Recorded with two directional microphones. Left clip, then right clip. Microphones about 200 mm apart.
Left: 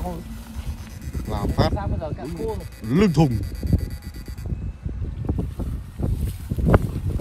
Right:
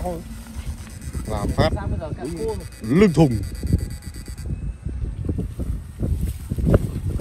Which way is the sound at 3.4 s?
40° left (ahead or behind).